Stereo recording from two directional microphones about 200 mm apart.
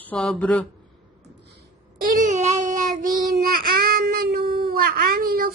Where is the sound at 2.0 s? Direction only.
40° right (ahead or behind).